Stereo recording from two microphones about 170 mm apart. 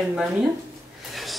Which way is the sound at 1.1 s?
Centre (ahead or behind).